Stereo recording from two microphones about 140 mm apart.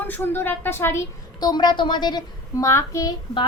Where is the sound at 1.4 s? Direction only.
30° left (ahead or behind).